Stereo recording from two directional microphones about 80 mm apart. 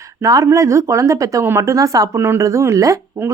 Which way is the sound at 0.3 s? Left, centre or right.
Right.